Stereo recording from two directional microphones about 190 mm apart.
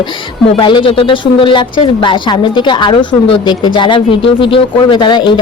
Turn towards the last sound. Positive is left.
turn(degrees=25)  # may be behind; listen again after turning